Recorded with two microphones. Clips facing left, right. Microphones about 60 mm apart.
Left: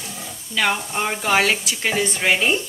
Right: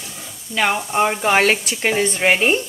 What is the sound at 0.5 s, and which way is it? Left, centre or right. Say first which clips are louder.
A woman's voice: right 3 dB; right.